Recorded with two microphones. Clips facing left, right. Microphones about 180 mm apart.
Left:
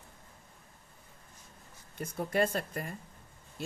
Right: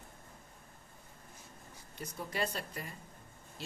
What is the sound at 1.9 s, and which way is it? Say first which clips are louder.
Speech: left 8 dB; 50° left (ahead or behind).